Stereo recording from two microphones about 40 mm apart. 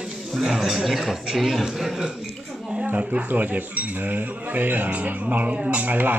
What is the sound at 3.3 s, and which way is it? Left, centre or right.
Speech, right.